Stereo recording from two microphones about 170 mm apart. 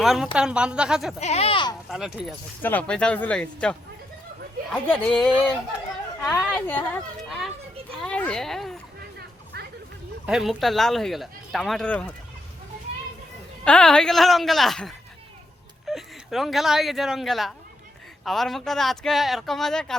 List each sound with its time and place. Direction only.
0.0 s speech: centre (ahead or behind)
1.2 s speech: 40° left (ahead or behind)
1.9 s speech: centre (ahead or behind)
2.6 s speech: 10° left (ahead or behind)
7.3 s children playing: centre (ahead or behind)
8.0 s a sound: 5° left (ahead or behind)
9.5 s music: 70° right (ahead or behind)
10.2 s speech: 5° right (ahead or behind)
13.7 s speech: 5° left (ahead or behind)